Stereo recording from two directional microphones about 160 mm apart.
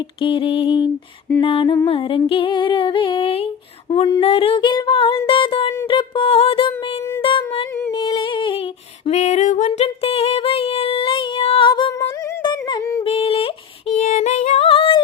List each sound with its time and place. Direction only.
0.2 s female singing: 30° left (ahead or behind)
7.2 s music: 30° left (ahead or behind)
7.9 s a sound: 30° left (ahead or behind)
9.0 s female singing: 45° left (ahead or behind); by 11.9 s 30° left (ahead or behind)
12.4 s a sound: 30° left (ahead or behind)
13.1 s female singing: 35° left (ahead or behind)
14.7 s singing: 35° left (ahead or behind)